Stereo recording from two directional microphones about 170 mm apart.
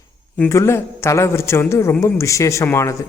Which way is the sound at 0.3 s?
15° left (ahead or behind).